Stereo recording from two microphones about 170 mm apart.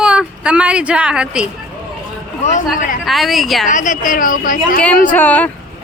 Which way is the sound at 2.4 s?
45° left (ahead or behind).